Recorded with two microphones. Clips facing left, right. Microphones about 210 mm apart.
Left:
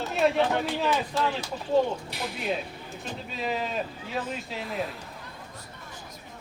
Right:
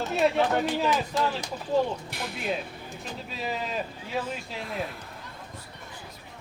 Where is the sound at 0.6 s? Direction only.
15° right (ahead or behind).